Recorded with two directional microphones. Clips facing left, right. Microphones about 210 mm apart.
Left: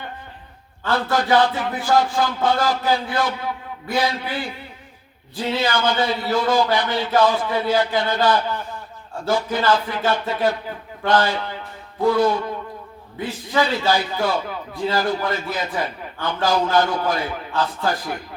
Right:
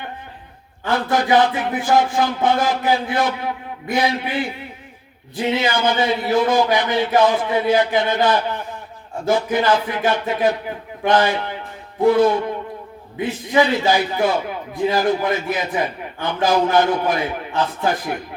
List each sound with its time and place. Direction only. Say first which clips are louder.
0.9 s a man's voice: right 2 dB; 20° right (ahead or behind)